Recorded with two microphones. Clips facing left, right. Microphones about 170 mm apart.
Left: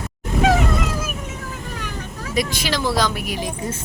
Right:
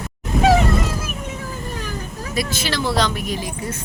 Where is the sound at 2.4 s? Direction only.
15° left (ahead or behind).